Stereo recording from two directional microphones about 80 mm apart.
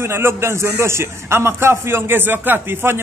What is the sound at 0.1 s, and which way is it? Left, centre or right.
A man's voice, right.